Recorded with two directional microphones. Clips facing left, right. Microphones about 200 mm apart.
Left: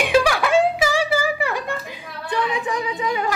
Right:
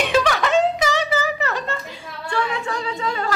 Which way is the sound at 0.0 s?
10° left (ahead or behind).